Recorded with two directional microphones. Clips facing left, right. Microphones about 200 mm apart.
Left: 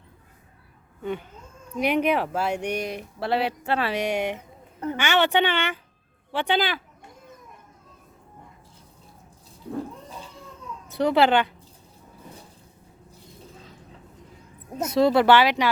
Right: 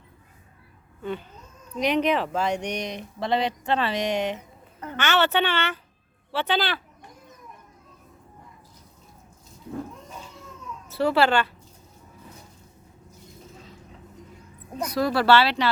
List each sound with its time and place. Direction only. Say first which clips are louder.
1.0 s speech: left 1 dB; 15° left (ahead or behind)
10.0 s cat: left 1 dB; 35° left (ahead or behind)
10.8 s speech: left 1 dB; 15° left (ahead or behind)
14.8 s speech: left 5 dB; 25° left (ahead or behind)